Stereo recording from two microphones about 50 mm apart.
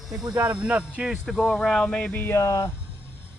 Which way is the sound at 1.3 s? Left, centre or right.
Centre.